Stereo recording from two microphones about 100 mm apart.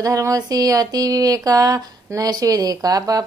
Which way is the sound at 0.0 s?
35° right (ahead or behind).